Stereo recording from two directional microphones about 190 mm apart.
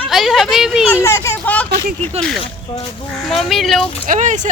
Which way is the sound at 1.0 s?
15° left (ahead or behind).